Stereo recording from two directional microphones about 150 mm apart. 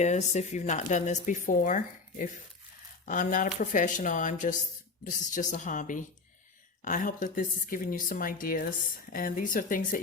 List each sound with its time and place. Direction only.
0.0 s a woman's voice: 50° left (ahead or behind); by 10.0 s 65° left (ahead or behind)